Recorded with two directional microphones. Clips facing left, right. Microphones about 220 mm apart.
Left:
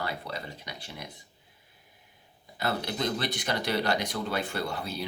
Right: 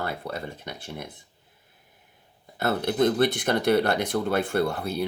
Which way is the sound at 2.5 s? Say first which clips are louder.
Right 7 dB; 50° right (ahead or behind).